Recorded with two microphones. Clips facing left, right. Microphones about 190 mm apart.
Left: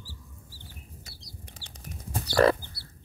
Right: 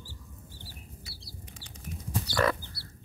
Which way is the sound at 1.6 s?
30° left (ahead or behind).